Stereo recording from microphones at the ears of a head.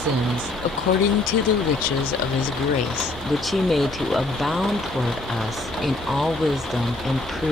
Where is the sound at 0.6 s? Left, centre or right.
Left.